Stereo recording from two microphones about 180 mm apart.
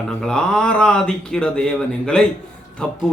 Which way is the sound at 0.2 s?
5° left (ahead or behind).